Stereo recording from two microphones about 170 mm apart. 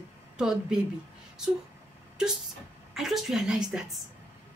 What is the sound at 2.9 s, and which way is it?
A woman's voice, centre (ahead or behind).